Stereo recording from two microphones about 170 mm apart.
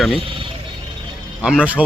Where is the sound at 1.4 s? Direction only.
5° right (ahead or behind).